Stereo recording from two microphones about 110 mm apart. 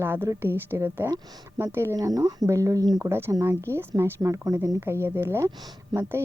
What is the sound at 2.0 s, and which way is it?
Speech, 35° right (ahead or behind).